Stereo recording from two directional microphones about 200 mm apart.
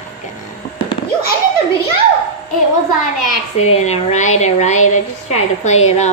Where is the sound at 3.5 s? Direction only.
35° left (ahead or behind).